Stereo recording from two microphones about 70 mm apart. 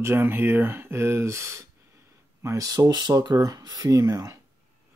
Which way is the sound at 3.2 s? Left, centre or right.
Right.